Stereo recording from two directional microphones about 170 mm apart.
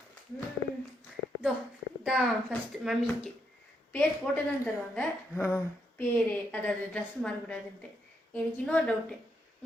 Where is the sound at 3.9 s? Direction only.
10° left (ahead or behind).